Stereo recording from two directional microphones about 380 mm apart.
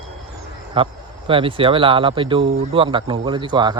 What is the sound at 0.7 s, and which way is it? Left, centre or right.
A man's voice, centre.